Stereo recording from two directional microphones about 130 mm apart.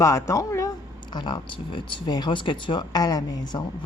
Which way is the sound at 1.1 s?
35° left (ahead or behind).